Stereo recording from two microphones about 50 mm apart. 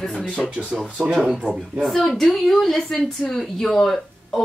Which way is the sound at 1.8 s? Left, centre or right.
Centre.